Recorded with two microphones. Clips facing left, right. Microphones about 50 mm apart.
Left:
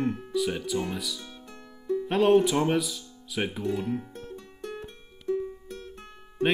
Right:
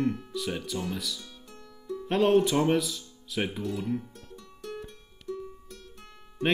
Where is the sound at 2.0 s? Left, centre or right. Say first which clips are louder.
Left 1 dB; centre.